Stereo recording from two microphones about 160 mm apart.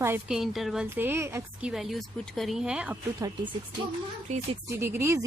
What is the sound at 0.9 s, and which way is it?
Speech, 15° right (ahead or behind).